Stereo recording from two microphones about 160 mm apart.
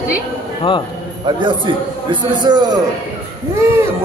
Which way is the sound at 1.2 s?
30° right (ahead or behind).